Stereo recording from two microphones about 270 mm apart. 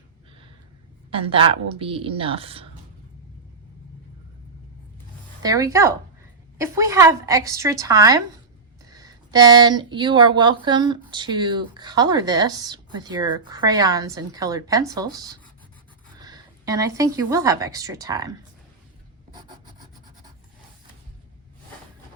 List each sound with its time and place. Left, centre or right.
1.1 s a woman's voice: centre
5.4 s speech: centre
19.3 s rub: centre